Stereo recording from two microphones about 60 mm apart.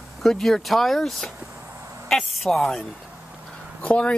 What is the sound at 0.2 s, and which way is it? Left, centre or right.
Speech, centre.